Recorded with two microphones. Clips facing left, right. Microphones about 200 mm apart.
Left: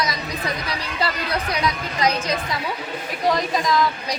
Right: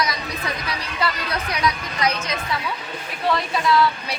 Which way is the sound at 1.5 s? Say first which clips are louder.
Even; 35° left (ahead or behind).